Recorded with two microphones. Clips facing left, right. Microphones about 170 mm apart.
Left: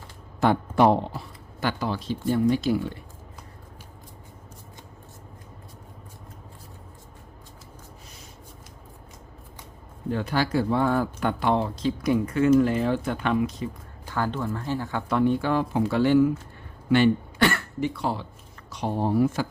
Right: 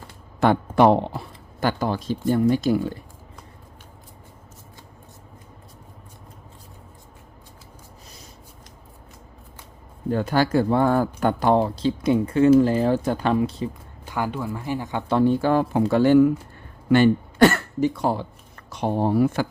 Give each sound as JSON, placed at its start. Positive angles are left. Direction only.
{"t": 0.3, "sound": "speech", "side_deg": -65}
{"t": 1.6, "sound": "speech", "side_deg": -45}
{"t": 10.1, "sound": "speech", "side_deg": -45}
{"t": 14.1, "sound": "speech", "side_deg": -10}
{"t": 15.1, "sound": "speech", "side_deg": -35}